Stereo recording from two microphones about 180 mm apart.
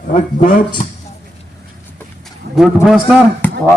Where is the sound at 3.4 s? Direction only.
10° left (ahead or behind).